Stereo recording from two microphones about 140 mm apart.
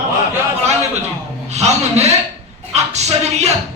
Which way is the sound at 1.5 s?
50° right (ahead or behind).